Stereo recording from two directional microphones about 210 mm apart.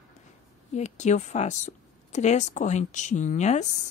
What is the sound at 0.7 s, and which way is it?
Speech, 35° left (ahead or behind).